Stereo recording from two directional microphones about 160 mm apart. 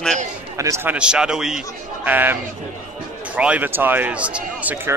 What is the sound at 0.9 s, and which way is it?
Speech, 5° right (ahead or behind).